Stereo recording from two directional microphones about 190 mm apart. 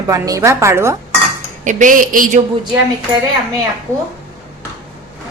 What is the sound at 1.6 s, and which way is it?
Speech, 45° right (ahead or behind).